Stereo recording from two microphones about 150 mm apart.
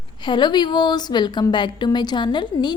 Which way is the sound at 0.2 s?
30° left (ahead or behind).